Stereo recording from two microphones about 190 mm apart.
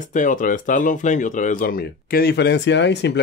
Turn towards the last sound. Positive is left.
turn(degrees=65)  # may be behind; listen again after turning